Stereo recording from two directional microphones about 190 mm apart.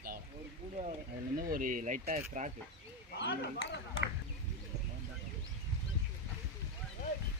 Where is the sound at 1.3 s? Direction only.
45° right (ahead or behind).